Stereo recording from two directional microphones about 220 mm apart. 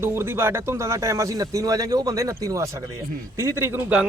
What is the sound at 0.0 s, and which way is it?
A man's voice, 10° right (ahead or behind).